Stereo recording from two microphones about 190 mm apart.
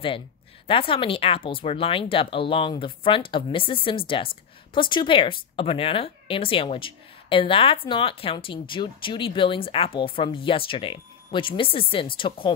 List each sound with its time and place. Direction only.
0.7 s speech: 30° left (ahead or behind)